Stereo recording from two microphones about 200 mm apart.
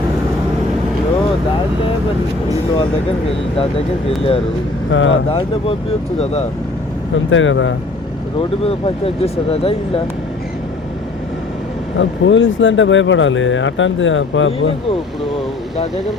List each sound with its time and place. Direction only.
4.9 s speech: 75° left (ahead or behind)
5.3 s speech: 30° left (ahead or behind)
7.3 s speech: 75° left (ahead or behind)
8.4 s speech: 30° left (ahead or behind)
11.9 s speech: 70° left (ahead or behind)